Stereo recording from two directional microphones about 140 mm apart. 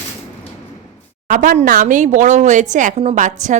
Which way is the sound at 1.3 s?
65° right (ahead or behind).